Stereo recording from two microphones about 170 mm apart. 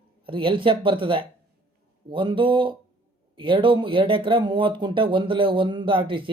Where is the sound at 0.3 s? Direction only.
30° right (ahead or behind).